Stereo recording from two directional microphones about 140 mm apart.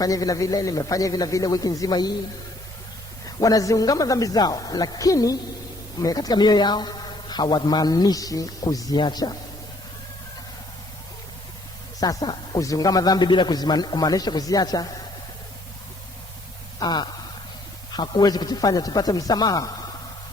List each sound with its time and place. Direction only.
0.0 s a man's voice: 25° left (ahead or behind)
3.2 s a man's voice: 25° left (ahead or behind)
11.9 s a man's voice: 30° left (ahead or behind)
16.8 s a man's voice: 30° left (ahead or behind)